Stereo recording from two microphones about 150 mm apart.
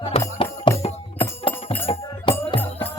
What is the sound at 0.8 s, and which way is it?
Music, 40° left (ahead or behind).